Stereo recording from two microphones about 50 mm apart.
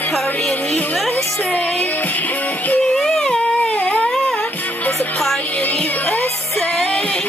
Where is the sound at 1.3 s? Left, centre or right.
Left.